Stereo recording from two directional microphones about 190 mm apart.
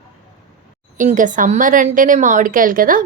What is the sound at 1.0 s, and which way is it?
A woman's voice, 45° right (ahead or behind).